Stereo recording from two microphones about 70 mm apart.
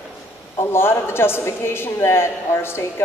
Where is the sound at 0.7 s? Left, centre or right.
Left.